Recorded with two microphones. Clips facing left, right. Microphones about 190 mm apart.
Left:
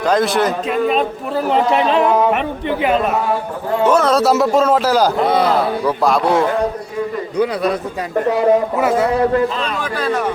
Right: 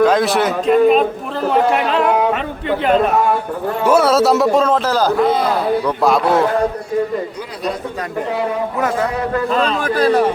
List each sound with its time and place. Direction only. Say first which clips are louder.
0.0 s speech: right 2 dB; centre (ahead or behind)
1.5 s speech: even; 20° left (ahead or behind)
3.8 s speech: right 1 dB; 10° right (ahead or behind); by 5.1 s 10° left (ahead or behind)
5.8 s speech: even; centre (ahead or behind)
9.5 s a man's voice: right 5 dB; 45° right (ahead or behind)